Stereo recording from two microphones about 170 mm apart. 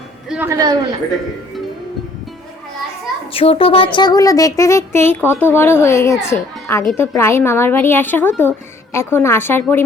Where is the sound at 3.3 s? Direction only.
35° left (ahead or behind).